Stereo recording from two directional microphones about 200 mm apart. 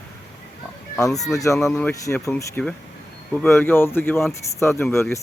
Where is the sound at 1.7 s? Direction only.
15° left (ahead or behind).